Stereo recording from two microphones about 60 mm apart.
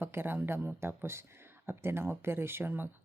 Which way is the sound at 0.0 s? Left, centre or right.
Right.